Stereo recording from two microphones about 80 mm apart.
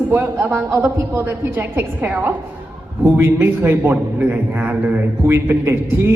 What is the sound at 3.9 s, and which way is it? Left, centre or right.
A woman's voice, right.